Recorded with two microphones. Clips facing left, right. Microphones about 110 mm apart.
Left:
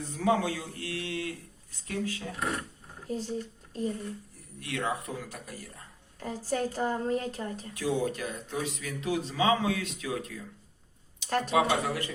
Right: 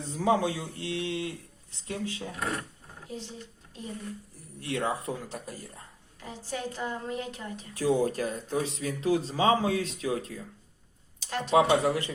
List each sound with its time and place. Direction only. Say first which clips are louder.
0.0 s a man's voice: right 1 dB; 20° right (ahead or behind)
3.1 s speech: left 6 dB; 45° left (ahead or behind)
4.6 s a man's voice: right 2 dB; 30° right (ahead or behind)
6.1 s a woman's voice: left 5 dB; 40° left (ahead or behind)
7.7 s speech: right 5 dB; 35° right (ahead or behind)
11.3 s speech: left 4 dB; 45° left (ahead or behind)
11.5 s a man's voice: right 6 dB; 25° right (ahead or behind)